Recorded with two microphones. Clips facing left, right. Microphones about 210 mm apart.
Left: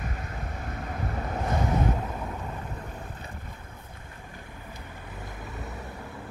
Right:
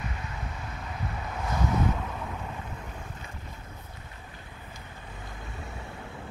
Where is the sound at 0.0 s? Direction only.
45° left (ahead or behind).